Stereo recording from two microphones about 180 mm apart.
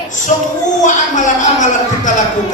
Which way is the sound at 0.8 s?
45° left (ahead or behind).